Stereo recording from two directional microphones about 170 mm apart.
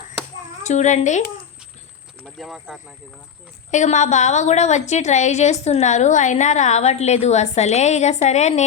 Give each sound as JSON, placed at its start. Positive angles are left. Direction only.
{"t": 0.6, "sound": "a woman's voice", "side_deg": 45}
{"t": 2.2, "sound": "speech", "side_deg": 0}
{"t": 3.7, "sound": "a woman's voice", "side_deg": 45}